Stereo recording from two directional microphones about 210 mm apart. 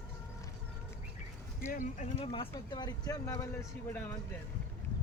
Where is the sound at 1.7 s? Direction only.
35° left (ahead or behind); by 4.2 s 10° left (ahead or behind).